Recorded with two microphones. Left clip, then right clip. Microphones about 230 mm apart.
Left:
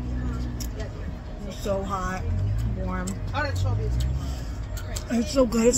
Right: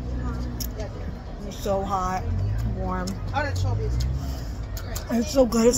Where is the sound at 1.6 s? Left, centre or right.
Centre.